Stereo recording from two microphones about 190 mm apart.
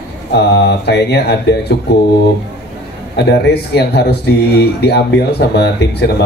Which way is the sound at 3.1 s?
60° left (ahead or behind).